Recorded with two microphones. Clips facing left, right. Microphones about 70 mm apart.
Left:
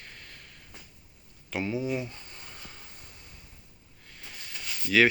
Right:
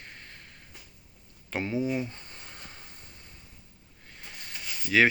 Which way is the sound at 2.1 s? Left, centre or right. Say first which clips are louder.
Even; right.